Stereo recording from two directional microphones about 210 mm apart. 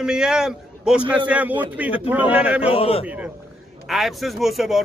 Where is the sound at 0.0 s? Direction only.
5° right (ahead or behind).